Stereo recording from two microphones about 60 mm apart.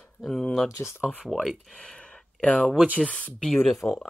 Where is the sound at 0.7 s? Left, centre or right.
Left.